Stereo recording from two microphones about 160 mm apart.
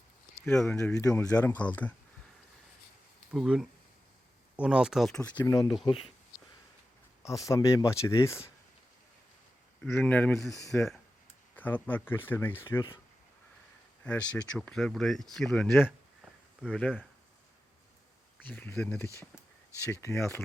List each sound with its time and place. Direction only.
0.4 s speech: 5° left (ahead or behind)
0.9 s speech: 20° left (ahead or behind)
1.2 s speech: 10° left (ahead or behind)
3.3 s speech: 5° right (ahead or behind)
5.8 s speech: 35° left (ahead or behind)
7.2 s speech: 20° left (ahead or behind)
9.8 s speech: 5° left (ahead or behind)
14.0 s speech: 10° left (ahead or behind)
18.4 s speech: 10° left (ahead or behind)
19.8 s speech: 15° left (ahead or behind)